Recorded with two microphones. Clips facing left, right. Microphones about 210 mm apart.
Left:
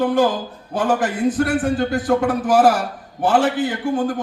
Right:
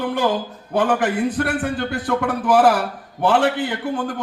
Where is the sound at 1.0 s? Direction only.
60° right (ahead or behind).